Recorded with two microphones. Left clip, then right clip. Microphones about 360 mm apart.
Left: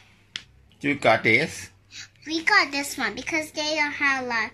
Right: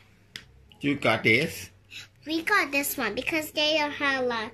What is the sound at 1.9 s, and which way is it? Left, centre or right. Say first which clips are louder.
A child's voice: left 1 dB; centre.